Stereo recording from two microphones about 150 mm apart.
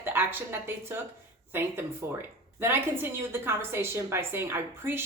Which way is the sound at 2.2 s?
15° right (ahead or behind).